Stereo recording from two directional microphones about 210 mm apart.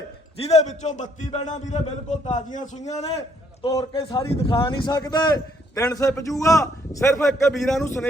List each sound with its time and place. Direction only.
0.3 s a man's voice: 30° left (ahead or behind)
3.6 s a man's voice: 20° left (ahead or behind)
7.3 s a man's voice: centre (ahead or behind)